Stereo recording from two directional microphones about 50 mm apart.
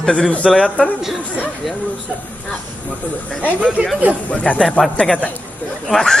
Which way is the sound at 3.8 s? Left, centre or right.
Right.